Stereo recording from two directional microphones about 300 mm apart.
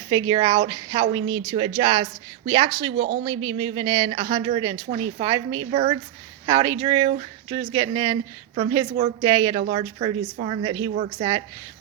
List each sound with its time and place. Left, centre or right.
0.1 s speech: centre